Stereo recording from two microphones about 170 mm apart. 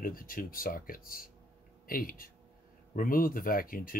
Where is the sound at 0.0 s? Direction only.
55° left (ahead or behind).